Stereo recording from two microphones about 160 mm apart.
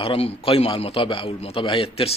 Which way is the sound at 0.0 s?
35° left (ahead or behind).